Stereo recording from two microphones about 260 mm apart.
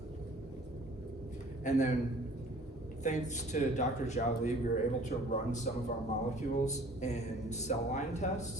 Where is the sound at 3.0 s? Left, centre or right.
Left.